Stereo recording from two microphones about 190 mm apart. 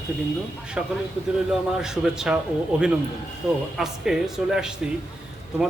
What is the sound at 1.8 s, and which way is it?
A man's voice, 5° right (ahead or behind).